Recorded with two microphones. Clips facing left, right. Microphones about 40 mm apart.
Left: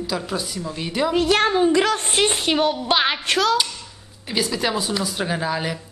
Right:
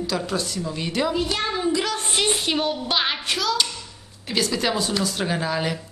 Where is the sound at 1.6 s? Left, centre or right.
Left.